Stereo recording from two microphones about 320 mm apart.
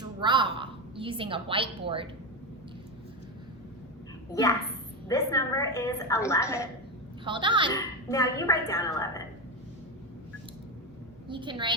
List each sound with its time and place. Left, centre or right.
0.0 s a sound: centre
4.3 s a woman's voice: centre
7.3 s a woman's voice: centre
7.7 s a woman's voice: centre
11.3 s a woman's voice: centre